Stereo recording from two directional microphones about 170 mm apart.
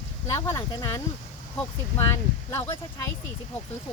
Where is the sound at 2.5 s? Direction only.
15° left (ahead or behind).